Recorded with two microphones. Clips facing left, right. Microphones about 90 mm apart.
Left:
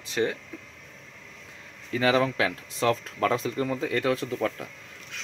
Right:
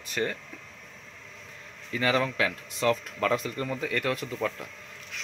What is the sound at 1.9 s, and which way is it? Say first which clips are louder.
Speech: left 3 dB; 25° left (ahead or behind).